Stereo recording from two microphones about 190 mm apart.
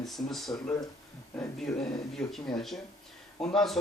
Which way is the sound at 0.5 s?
15° left (ahead or behind).